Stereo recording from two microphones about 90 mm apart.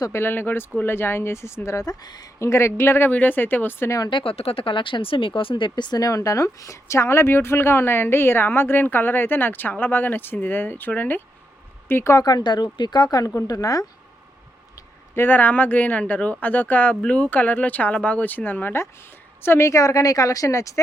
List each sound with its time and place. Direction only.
0.1 s speech: 25° left (ahead or behind); by 2.3 s 50° left (ahead or behind)
2.4 s speech: 30° left (ahead or behind)
4.1 s speech: 90° left; by 12.1 s 25° left (ahead or behind)
12.1 s speech: 50° left (ahead or behind)
15.1 s speech: 20° left (ahead or behind)